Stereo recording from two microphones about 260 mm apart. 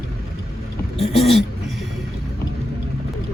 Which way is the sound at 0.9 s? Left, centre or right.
Left.